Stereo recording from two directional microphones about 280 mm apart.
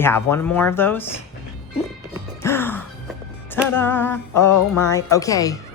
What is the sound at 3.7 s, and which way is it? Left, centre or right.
A woman's voice, centre.